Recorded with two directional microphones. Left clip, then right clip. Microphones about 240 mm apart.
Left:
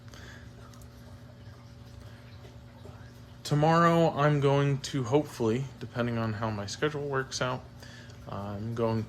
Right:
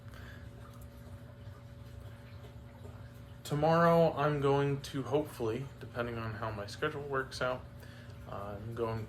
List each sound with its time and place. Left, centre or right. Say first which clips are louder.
3.4 s speech: left 4 dB; left
8.7 s speech: left 7 dB; left